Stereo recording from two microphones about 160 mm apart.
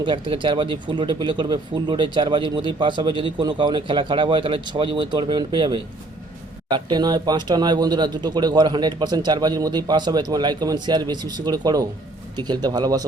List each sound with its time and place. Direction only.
0.0 s speech: 30° right (ahead or behind)